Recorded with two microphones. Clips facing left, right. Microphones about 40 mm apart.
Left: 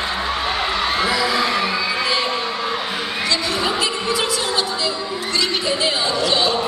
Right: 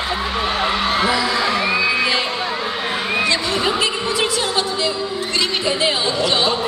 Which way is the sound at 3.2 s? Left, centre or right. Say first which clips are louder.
Right 2 dB; right.